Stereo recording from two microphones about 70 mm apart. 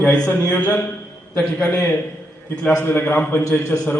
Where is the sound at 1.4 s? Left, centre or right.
Centre.